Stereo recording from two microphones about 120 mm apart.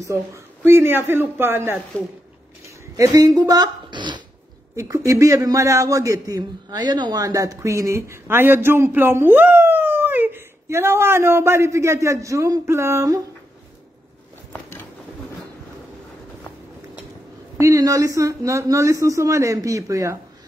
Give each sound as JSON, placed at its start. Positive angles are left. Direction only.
{"t": 0.0, "sound": "a man's voice", "side_deg": -25}
{"t": 3.0, "sound": "speech", "side_deg": -30}
{"t": 4.7, "sound": "a man's voice", "side_deg": -25}
{"t": 14.5, "sound": "a sound", "side_deg": 15}
{"t": 17.6, "sound": "a man's voice", "side_deg": -25}